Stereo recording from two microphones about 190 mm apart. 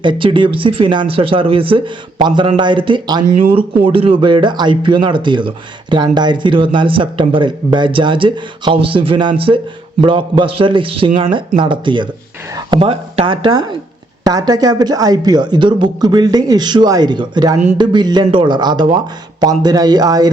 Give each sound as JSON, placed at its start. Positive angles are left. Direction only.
{"t": 0.0, "sound": "speech", "side_deg": -25}